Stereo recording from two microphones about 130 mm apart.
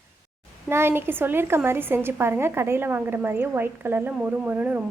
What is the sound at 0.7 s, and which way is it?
A woman's voice, 20° right (ahead or behind).